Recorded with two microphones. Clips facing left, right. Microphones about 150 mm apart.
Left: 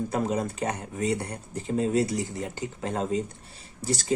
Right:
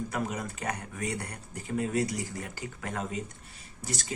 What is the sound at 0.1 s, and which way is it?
Speech, 30° left (ahead or behind).